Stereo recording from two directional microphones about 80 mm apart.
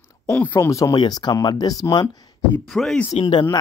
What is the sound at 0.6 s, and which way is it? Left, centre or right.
Speech, left.